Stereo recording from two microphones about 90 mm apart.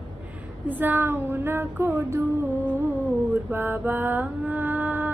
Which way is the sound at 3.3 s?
20° right (ahead or behind).